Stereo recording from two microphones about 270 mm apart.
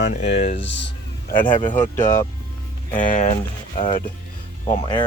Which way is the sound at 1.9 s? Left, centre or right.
Centre.